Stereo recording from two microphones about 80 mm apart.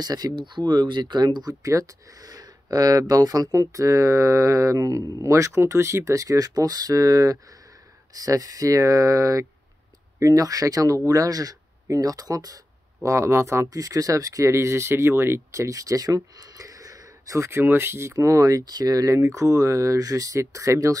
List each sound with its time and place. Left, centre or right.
0.0 s speech: right
13.0 s speech: right